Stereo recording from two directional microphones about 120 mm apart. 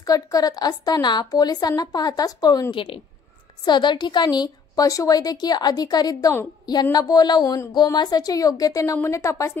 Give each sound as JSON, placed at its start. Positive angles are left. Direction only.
{"t": 0.0, "sound": "a woman's voice", "side_deg": 30}
{"t": 2.7, "sound": "a woman's voice", "side_deg": 45}